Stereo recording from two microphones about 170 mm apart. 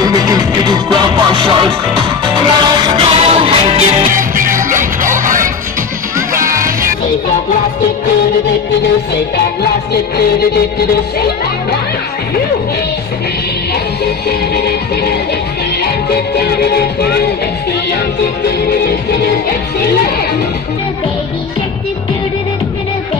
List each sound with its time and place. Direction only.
0.0 s music: 20° right (ahead or behind)
4.1 s music: 50° right (ahead or behind)
14.0 s music: 70° left (ahead or behind)
16.3 s music: 70° left (ahead or behind)